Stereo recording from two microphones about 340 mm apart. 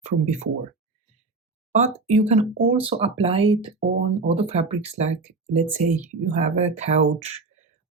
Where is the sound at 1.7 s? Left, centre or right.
Centre.